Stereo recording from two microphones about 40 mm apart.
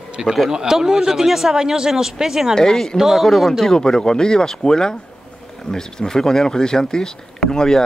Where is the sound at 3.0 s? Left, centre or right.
Centre.